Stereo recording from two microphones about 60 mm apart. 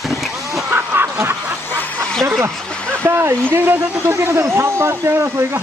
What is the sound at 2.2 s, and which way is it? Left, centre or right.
Speech, right.